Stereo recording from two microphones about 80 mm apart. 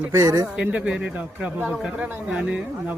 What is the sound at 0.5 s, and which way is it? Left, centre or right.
Speech, centre.